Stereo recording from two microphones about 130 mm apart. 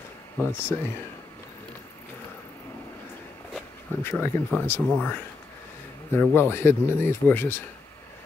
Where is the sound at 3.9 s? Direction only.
15° left (ahead or behind).